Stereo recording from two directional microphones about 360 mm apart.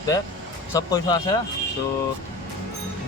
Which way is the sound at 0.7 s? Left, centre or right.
Centre.